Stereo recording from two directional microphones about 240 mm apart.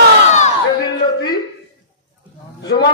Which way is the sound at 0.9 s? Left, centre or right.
Centre.